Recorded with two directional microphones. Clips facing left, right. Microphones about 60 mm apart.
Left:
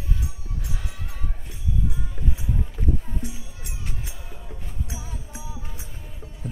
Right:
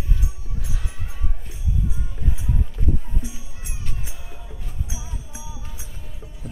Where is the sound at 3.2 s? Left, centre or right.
Centre.